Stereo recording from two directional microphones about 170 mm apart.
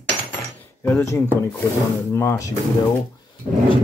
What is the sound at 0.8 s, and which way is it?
Speech, 15° left (ahead or behind).